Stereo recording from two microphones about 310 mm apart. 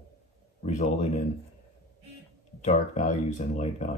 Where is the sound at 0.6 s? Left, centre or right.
Left.